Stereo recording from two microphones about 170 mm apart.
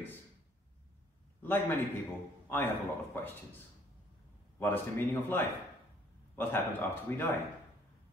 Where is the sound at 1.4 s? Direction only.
10° left (ahead or behind).